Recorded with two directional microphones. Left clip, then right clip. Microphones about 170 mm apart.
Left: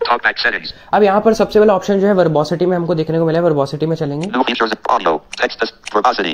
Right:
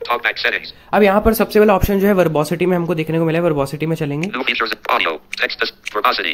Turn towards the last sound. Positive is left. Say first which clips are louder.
# left 3 dB
turn(degrees=-5)  # may be behind; listen again after turning